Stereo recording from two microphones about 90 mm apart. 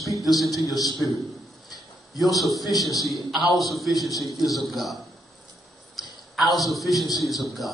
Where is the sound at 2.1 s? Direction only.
Centre (ahead or behind).